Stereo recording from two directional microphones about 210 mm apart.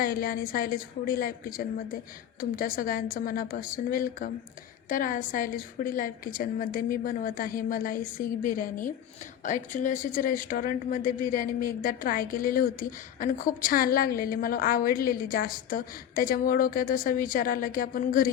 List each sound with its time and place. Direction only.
0.0 s a woman's voice: 45° left (ahead or behind)
2.4 s a woman's voice: 45° left (ahead or behind)